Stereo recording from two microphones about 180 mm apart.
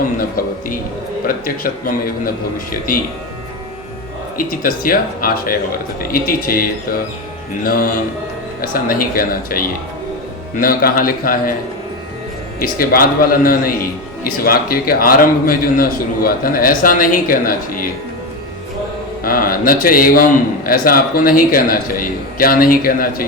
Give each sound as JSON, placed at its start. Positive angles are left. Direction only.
{"t": 0.2, "sound": "a man's voice", "side_deg": 55}
{"t": 4.4, "sound": "a man's voice", "side_deg": 50}
{"t": 12.5, "sound": "a man's voice", "side_deg": 55}
{"t": 19.2, "sound": "a man's voice", "side_deg": 55}